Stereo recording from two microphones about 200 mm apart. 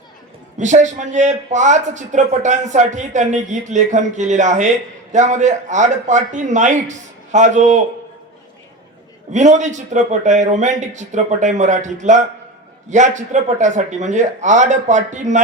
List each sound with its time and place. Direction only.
0.6 s a man's voice: 35° right (ahead or behind)
9.3 s a man's voice: 35° right (ahead or behind)